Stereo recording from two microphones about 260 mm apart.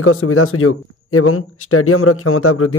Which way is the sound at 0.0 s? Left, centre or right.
Left.